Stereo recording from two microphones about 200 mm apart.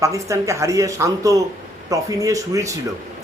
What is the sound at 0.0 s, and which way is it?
A man's voice, 15° right (ahead or behind).